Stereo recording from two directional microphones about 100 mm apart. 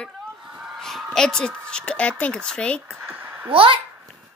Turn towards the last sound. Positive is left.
turn(degrees=-65)  # may be behind; listen again after turning